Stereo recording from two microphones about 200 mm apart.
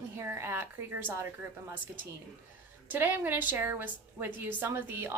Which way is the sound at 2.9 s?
10° right (ahead or behind).